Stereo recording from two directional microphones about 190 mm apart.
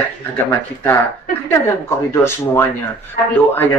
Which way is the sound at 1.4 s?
15° left (ahead or behind).